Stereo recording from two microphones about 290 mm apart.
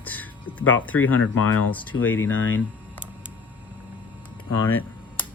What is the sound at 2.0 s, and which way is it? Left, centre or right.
Speech, left.